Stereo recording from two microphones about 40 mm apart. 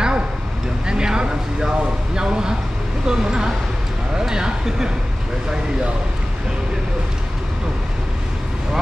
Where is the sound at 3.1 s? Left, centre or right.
Centre.